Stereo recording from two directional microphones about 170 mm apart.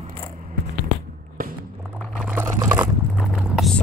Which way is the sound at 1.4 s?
55° right (ahead or behind).